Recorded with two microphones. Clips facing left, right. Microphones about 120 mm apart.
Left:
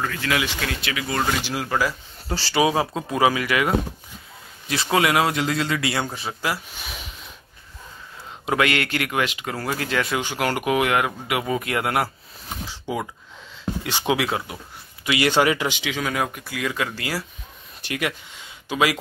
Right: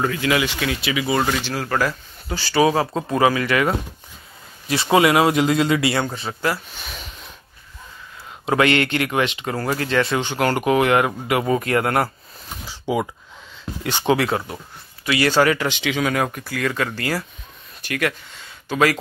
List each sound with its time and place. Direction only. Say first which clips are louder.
0.3 s speech: right 4 dB; 5° right (ahead or behind)
1.4 s speech: right 2 dB; 15° left (ahead or behind)
2.2 s speech: even; 35° left (ahead or behind)
2.5 s speech: right 3 dB; 15° left (ahead or behind)
4.9 s a man's voice: right 5 dB; 5° right (ahead or behind)
5.9 s speech: right 4 dB; 5° left (ahead or behind)
8.5 s speech: right 4 dB; 5° left (ahead or behind)
12.6 s speech: right 6 dB; 5° right (ahead or behind)
15.0 s speech: right 2 dB; 20° left (ahead or behind)